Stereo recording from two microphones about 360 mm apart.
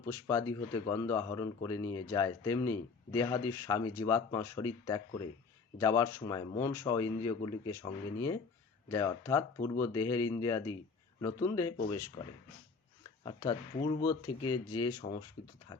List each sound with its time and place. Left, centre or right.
0.0 s speech: centre
12.2 s speech: left
13.2 s speech: centre
14.7 s speech: left